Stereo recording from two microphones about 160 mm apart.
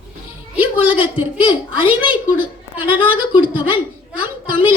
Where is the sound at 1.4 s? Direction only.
35° left (ahead or behind).